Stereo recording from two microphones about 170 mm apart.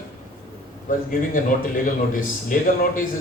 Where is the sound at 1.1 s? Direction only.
50° left (ahead or behind).